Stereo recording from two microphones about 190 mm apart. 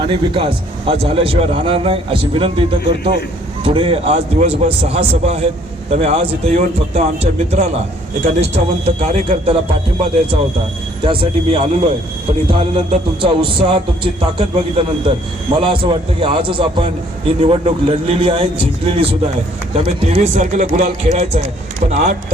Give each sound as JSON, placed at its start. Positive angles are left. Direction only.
{"t": 0.0, "sound": "a man's voice", "side_deg": -30}
{"t": 11.0, "sound": "a man's voice", "side_deg": -25}